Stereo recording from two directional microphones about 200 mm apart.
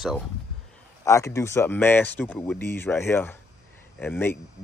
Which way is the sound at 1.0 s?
15° left (ahead or behind).